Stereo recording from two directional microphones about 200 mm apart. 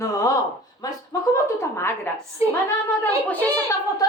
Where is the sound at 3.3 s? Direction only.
10° left (ahead or behind).